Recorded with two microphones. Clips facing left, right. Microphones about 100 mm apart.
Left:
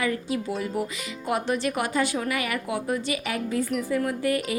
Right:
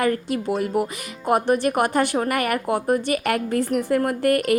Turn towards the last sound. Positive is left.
turn(degrees=-60)  # may be behind; listen again after turning